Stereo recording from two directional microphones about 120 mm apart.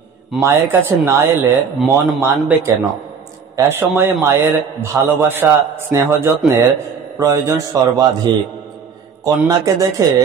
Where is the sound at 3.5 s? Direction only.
20° right (ahead or behind); by 8.3 s 35° right (ahead or behind).